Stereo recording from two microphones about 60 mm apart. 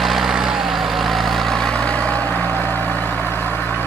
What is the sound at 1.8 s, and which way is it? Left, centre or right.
Vehicle, left.